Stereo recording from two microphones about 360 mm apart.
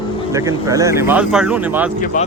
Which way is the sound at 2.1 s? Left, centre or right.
Left.